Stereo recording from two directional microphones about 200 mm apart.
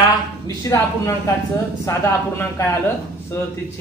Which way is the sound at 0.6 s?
15° left (ahead or behind).